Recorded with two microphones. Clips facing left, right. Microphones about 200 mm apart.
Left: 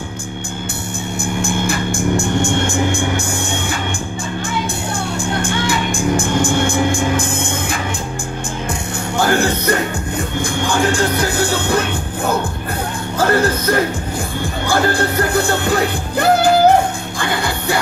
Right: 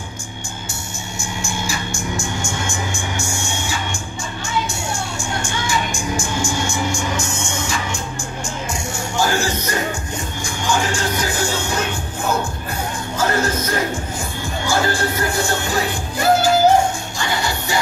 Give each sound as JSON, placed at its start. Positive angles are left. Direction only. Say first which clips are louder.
{"t": 1.2, "sound": "music", "louder": "left 7 dB", "side_deg": 55}
{"t": 5.4, "sound": "music", "louder": "left 2 dB", "side_deg": 60}
{"t": 9.1, "sound": "music", "louder": "left 4 dB", "side_deg": 60}
{"t": 13.2, "sound": "music", "louder": "left 5 dB", "side_deg": 60}